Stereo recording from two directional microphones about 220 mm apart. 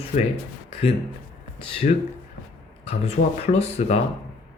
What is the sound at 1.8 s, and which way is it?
Speech, 35° left (ahead or behind).